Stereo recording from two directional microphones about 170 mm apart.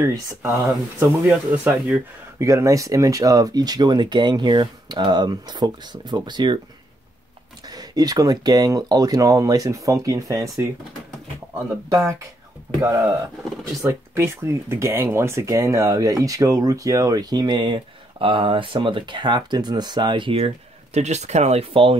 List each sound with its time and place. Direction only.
0.0 s speech: 15° right (ahead or behind)
7.7 s speech: 20° right (ahead or behind)
13.8 s speech: 15° right (ahead or behind); by 21.9 s 35° right (ahead or behind)